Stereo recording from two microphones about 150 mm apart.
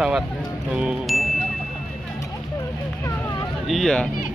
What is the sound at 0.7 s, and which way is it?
Music, 5° right (ahead or behind).